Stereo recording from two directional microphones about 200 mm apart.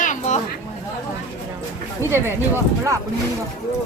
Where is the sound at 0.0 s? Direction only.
40° left (ahead or behind).